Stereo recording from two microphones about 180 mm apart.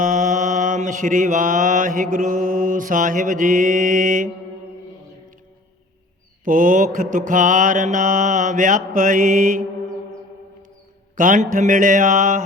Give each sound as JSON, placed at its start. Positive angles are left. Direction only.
{"t": 0.0, "sound": "mantra", "side_deg": -45}
{"t": 6.4, "sound": "mantra", "side_deg": -45}
{"t": 11.2, "sound": "mantra", "side_deg": -45}